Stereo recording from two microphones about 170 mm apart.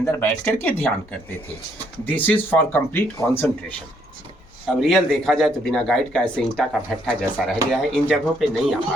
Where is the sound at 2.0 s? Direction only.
10° left (ahead or behind).